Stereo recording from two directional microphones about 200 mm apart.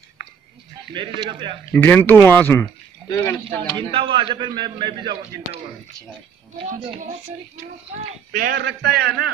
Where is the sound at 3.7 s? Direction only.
25° right (ahead or behind).